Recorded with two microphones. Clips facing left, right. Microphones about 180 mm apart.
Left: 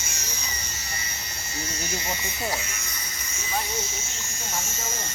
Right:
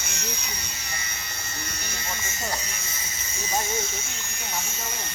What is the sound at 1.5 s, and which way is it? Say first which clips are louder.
Electric shaver: left 7 dB; 60° right (ahead or behind).